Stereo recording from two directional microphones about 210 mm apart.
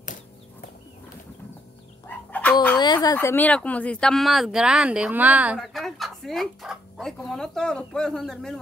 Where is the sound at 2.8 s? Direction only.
20° left (ahead or behind).